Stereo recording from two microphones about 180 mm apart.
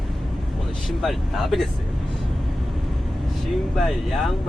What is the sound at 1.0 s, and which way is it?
Speech, centre (ahead or behind).